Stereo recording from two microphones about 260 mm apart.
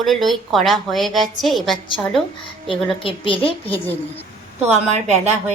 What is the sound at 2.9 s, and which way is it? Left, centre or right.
Speech, centre.